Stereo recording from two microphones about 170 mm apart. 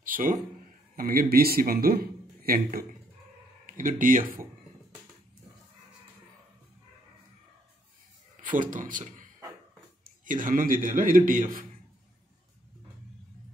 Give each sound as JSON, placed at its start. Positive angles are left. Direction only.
{"t": 0.0, "sound": "a sound", "side_deg": -55}
{"t": 0.9, "sound": "a man's voice", "side_deg": -60}
{"t": 8.4, "sound": "a man's voice", "side_deg": -50}